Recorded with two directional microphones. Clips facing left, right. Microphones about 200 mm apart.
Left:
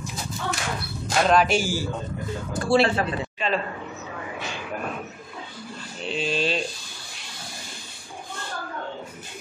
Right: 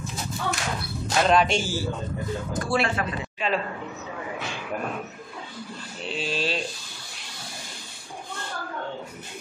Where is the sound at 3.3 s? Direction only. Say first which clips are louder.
Right 1 dB; 10° right (ahead or behind).